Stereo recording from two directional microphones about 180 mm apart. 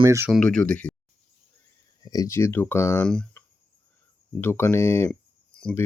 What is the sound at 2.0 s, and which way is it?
Speech, 20° left (ahead or behind).